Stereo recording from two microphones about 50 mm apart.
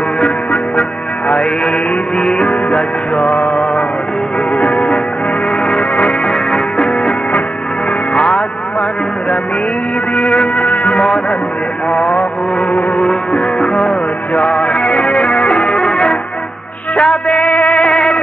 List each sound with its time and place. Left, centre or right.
0.2 s music: left
2.1 s music: centre; by 6.3 s left
6.3 s music: centre
10.1 s music: left
11.9 s vehicle: left
13.0 s music: centre